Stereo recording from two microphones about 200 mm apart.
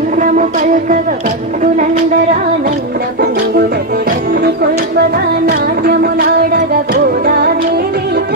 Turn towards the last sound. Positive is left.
turn(degrees=-50)  # may be behind; listen again after turning